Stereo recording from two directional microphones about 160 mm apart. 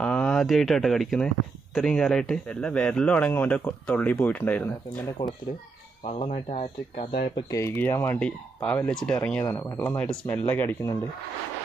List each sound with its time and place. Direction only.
0.0 s speech: 5° left (ahead or behind)
6.0 s speech: 40° left (ahead or behind)
7.5 s speech: 15° left (ahead or behind)